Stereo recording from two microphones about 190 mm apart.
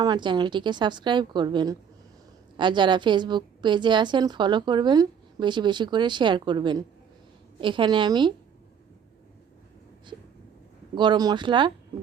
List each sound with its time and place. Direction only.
0.0 s a woman's voice: 25° right (ahead or behind)
10.9 s a woman's voice: 25° right (ahead or behind)